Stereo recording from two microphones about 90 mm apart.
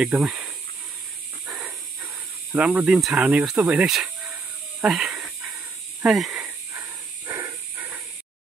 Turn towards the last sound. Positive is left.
turn(degrees=-35)  # may be behind; listen again after turning